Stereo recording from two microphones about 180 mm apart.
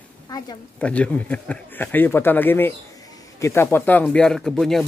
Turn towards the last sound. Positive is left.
turn(degrees=0)  # may be behind; listen again after turning